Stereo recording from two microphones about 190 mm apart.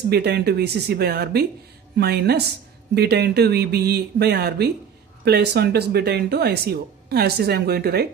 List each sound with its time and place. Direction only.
0.1 s speech: 55° right (ahead or behind)